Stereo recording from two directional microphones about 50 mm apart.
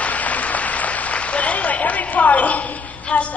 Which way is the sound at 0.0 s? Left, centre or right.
Left.